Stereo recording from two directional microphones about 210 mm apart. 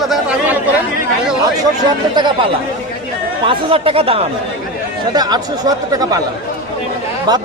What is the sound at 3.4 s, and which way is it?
Speech, 25° right (ahead or behind).